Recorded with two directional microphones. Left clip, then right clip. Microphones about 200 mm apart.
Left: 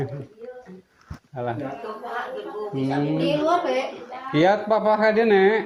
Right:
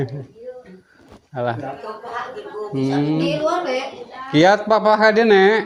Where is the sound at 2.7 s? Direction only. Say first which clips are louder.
Right 5 dB; 55° right (ahead or behind).